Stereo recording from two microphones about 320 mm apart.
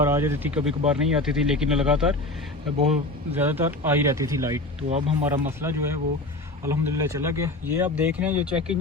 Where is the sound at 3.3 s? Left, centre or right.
Centre.